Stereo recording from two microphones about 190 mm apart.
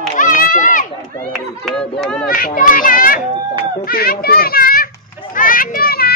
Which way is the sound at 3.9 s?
50° left (ahead or behind).